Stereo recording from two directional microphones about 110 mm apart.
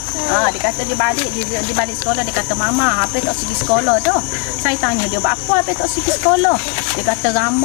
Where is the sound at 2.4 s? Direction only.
25° left (ahead or behind).